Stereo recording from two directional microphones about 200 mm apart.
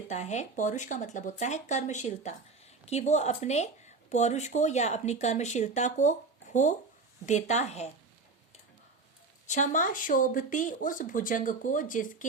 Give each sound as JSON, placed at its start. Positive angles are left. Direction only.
{"t": 0.1, "sound": "speech", "side_deg": 35}
{"t": 9.5, "sound": "speech", "side_deg": 40}